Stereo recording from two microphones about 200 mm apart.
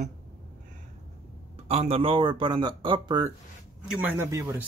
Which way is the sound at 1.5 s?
30° right (ahead or behind).